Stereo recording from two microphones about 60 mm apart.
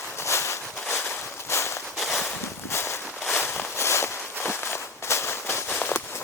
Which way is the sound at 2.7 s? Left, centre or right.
Left.